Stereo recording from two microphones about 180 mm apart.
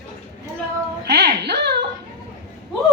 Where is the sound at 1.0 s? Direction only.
65° right (ahead or behind).